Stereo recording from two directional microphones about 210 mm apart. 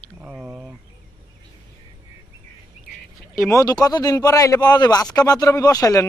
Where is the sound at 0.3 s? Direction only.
5° right (ahead or behind).